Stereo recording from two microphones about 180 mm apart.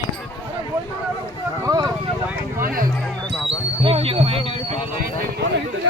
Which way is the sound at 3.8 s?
30° right (ahead or behind).